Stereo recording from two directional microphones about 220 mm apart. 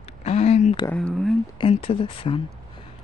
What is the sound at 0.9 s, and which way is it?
Speech, centre (ahead or behind).